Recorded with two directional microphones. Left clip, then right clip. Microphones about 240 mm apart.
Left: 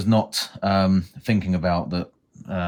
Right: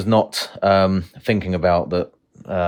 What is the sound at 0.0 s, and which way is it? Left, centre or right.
Speech, right.